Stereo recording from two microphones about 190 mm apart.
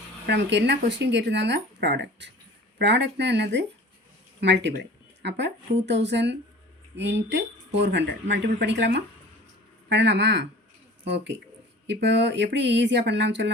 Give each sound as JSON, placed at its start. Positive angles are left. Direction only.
{"t": 0.3, "sound": "speech", "side_deg": -65}